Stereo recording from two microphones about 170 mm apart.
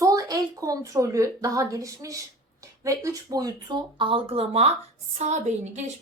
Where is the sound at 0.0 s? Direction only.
20° right (ahead or behind).